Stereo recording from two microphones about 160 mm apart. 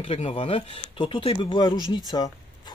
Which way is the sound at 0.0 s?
40° left (ahead or behind).